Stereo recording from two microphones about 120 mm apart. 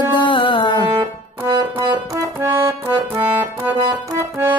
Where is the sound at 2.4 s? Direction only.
15° right (ahead or behind).